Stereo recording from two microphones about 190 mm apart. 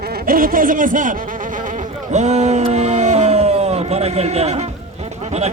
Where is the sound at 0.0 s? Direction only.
55° right (ahead or behind); by 4.7 s 35° right (ahead or behind).